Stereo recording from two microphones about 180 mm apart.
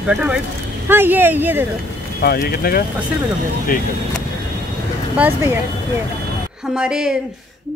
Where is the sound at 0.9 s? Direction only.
10° right (ahead or behind).